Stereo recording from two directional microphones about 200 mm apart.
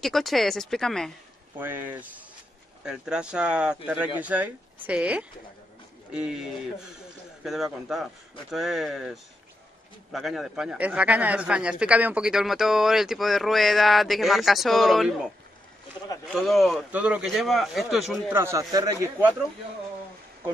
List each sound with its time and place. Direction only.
0.0 s speech: centre (ahead or behind)
1.6 s speech: 10° right (ahead or behind)
18.3 s speech: 15° right (ahead or behind)